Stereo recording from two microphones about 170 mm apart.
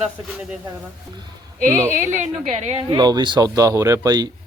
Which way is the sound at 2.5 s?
40° right (ahead or behind).